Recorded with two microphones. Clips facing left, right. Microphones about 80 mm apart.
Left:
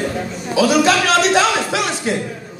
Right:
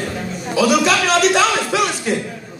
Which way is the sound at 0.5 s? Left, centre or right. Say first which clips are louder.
Left 1 dB; left.